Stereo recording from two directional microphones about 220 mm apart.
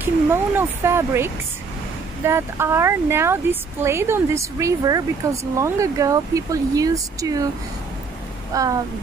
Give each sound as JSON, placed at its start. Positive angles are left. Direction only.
{"t": 0.0, "sound": "speech", "side_deg": -10}
{"t": 8.5, "sound": "speech", "side_deg": -15}